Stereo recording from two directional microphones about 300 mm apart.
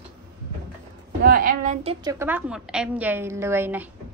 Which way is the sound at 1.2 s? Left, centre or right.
Right.